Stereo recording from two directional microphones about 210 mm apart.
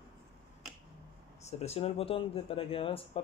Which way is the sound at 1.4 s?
30° left (ahead or behind).